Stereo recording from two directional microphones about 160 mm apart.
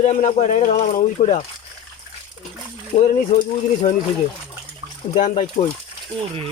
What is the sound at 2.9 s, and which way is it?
Speech, 45° left (ahead or behind).